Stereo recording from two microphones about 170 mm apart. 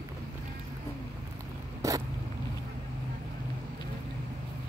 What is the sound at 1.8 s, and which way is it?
Vehicle, 20° right (ahead or behind).